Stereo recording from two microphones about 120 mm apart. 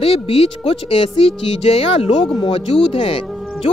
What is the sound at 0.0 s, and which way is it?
Speech, 55° left (ahead or behind).